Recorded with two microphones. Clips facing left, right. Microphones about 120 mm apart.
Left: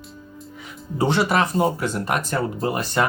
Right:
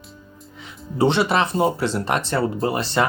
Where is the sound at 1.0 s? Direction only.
25° right (ahead or behind).